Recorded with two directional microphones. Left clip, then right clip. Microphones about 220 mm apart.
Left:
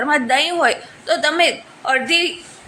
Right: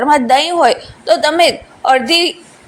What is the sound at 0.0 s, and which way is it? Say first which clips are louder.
A woman's voice: right 6 dB; 20° right (ahead or behind).